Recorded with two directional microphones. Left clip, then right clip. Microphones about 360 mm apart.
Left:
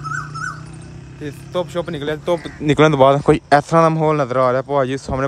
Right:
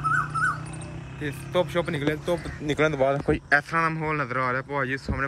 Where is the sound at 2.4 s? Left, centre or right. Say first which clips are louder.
Left 13 dB; left.